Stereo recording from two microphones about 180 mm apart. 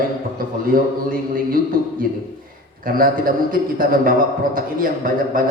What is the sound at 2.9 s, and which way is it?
A man's voice, 50° right (ahead or behind).